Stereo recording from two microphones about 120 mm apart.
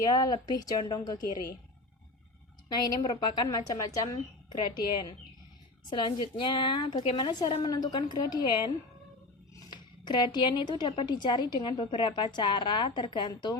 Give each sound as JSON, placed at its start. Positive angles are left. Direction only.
{"t": 0.0, "sound": "a woman's voice", "side_deg": 35}
{"t": 2.6, "sound": "a woman's voice", "side_deg": 35}
{"t": 9.6, "sound": "a woman's voice", "side_deg": 40}